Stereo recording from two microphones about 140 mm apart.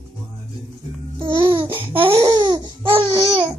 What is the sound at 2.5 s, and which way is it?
Babbling, 35° right (ahead or behind).